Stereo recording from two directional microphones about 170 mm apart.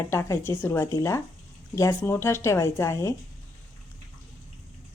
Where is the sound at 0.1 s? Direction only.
15° left (ahead or behind).